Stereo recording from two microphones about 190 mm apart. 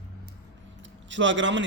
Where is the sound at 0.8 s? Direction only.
75° right (ahead or behind).